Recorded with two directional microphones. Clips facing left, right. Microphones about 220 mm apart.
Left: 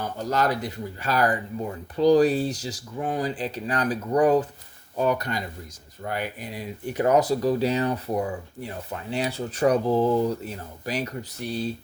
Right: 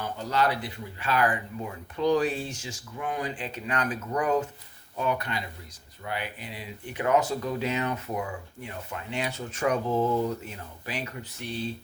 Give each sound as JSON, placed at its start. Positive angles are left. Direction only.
{"t": 0.2, "sound": "speech", "side_deg": 45}